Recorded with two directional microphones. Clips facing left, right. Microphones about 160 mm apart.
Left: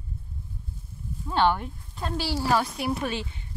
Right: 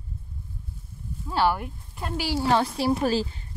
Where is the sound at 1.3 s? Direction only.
5° right (ahead or behind).